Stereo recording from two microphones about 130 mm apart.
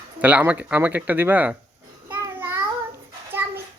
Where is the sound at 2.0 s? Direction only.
15° right (ahead or behind).